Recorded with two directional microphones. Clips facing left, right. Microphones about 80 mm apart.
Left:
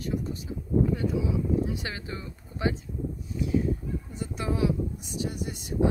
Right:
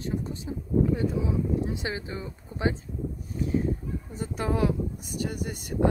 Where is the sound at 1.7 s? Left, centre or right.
Right.